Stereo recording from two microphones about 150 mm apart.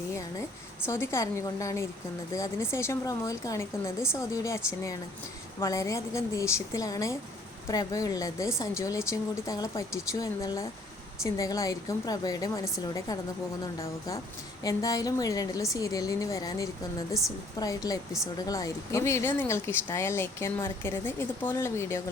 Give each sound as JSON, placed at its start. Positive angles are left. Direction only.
{"t": 0.1, "sound": "a sound", "side_deg": 20}
{"t": 0.9, "sound": "a woman's voice", "side_deg": 15}
{"t": 14.6, "sound": "a woman's voice", "side_deg": 25}